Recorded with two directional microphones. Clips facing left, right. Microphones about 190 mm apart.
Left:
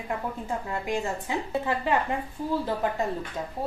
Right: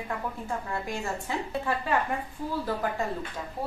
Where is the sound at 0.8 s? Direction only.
20° left (ahead or behind).